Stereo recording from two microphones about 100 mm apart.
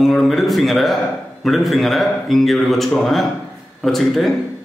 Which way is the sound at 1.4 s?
Centre (ahead or behind).